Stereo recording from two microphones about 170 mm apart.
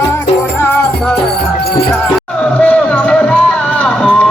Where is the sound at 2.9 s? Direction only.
5° left (ahead or behind).